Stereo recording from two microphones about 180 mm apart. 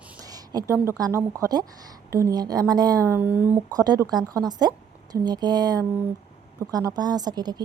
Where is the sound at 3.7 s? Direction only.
20° right (ahead or behind).